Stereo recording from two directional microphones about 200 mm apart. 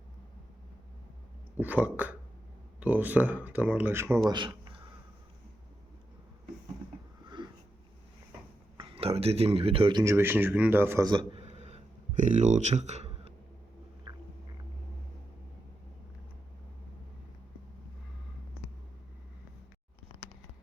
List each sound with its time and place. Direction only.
1.5 s speech: 10° right (ahead or behind)
4.3 s a sound: 20° right (ahead or behind)
7.4 s sniff: 20° right (ahead or behind)
8.8 s speech: 30° right (ahead or behind)
10.0 s a man's voice: 15° right (ahead or behind); by 13.3 s 35° right (ahead or behind)
14.1 s a sound: 25° right (ahead or behind)